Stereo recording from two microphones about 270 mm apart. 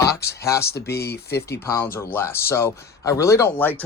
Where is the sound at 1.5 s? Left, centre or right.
Centre.